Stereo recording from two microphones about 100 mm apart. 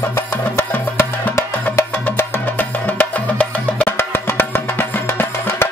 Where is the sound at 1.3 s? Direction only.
30° left (ahead or behind).